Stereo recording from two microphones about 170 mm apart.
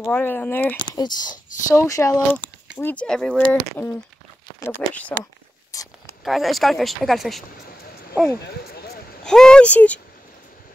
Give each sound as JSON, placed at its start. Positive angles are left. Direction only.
{"t": 0.0, "sound": "speech", "side_deg": 10}
{"t": 0.9, "sound": "speech", "side_deg": 25}
{"t": 2.8, "sound": "speech", "side_deg": 10}
{"t": 5.7, "sound": "a sound", "side_deg": 20}
{"t": 6.2, "sound": "speech", "side_deg": 0}
{"t": 9.2, "sound": "speech", "side_deg": 5}